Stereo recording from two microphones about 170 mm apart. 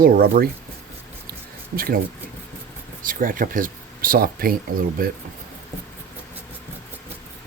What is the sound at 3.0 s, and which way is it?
Speech, 55° right (ahead or behind).